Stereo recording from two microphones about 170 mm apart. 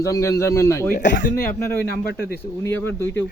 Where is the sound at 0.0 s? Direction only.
20° left (ahead or behind).